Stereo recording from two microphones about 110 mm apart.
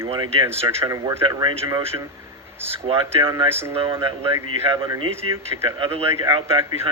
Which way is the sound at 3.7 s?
55° right (ahead or behind).